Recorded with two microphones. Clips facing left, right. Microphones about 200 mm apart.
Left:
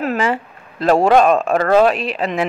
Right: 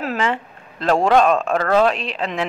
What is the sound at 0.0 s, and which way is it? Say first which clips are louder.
Speech: left 3 dB; 5° left (ahead or behind).